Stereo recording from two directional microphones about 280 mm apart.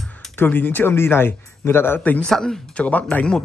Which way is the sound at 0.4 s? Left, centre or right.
Centre.